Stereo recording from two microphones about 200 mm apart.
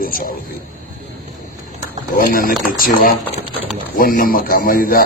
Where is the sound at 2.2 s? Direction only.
45° left (ahead or behind).